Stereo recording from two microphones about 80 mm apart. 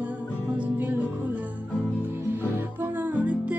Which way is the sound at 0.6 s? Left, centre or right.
Centre.